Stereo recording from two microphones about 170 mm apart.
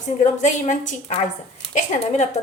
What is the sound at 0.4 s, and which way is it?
A woman's voice, 45° left (ahead or behind).